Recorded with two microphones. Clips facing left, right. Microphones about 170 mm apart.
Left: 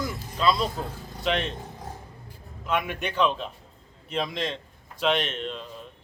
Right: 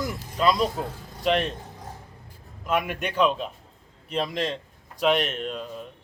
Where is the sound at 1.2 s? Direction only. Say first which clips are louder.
Right 4 dB; 40° right (ahead or behind).